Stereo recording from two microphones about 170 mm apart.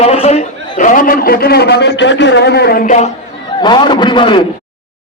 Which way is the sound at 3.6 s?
25° left (ahead or behind).